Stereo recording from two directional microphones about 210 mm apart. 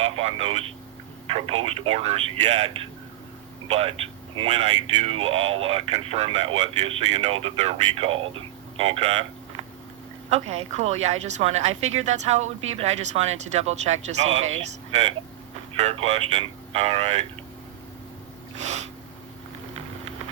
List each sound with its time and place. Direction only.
0.0 s speech: 30° right (ahead or behind)
10.2 s speech: 30° right (ahead or behind)